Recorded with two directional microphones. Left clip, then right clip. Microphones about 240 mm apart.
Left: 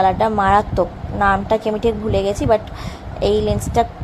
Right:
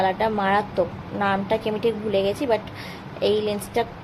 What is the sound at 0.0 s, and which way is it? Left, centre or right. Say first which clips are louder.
A woman's voice: left 6 dB; centre.